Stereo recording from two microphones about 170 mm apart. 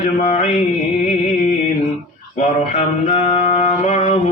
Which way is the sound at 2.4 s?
40° left (ahead or behind).